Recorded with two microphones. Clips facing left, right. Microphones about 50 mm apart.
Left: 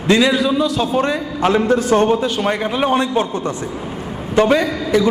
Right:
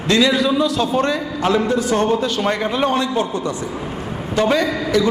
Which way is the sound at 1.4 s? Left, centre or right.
Left.